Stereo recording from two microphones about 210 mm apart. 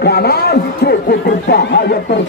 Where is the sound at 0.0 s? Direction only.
50° left (ahead or behind).